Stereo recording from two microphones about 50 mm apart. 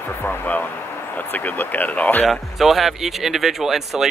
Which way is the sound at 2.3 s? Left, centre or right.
Centre.